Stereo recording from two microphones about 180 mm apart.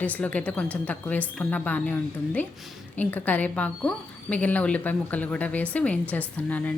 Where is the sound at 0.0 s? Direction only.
10° left (ahead or behind).